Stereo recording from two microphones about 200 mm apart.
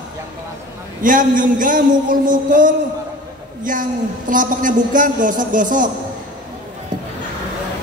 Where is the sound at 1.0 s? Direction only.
40° right (ahead or behind).